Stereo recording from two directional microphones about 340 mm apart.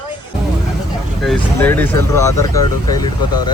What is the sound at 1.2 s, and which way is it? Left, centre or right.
Speech, centre.